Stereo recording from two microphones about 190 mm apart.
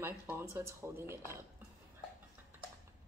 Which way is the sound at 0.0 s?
15° right (ahead or behind).